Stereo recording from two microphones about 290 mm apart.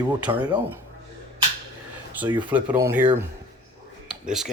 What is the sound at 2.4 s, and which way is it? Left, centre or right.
Speech, centre.